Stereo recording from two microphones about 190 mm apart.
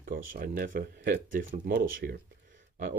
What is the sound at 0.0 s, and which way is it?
Speech, 50° right (ahead or behind).